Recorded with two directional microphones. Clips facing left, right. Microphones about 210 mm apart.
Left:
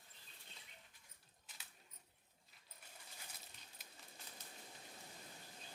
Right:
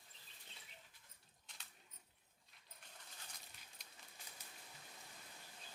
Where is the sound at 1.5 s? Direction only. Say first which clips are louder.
Even; 5° left (ahead or behind).